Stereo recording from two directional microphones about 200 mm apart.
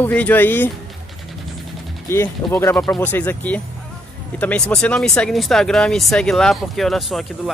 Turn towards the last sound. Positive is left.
turn(degrees=0)  # may be behind; listen again after turning